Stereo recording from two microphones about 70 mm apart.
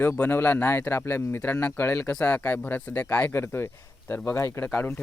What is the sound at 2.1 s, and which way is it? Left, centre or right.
Speech, centre.